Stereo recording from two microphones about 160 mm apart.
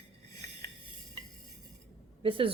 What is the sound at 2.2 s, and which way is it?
Speech, 35° right (ahead or behind).